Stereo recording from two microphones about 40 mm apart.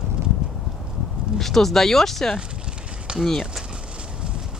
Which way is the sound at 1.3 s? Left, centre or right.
Centre.